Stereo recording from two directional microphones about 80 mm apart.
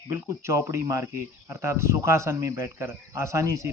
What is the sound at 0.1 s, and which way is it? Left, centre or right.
Speech, right.